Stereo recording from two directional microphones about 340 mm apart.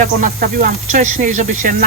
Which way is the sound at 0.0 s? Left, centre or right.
Right.